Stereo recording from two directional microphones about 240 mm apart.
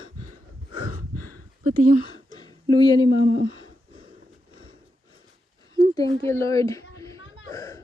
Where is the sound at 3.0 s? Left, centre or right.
Left.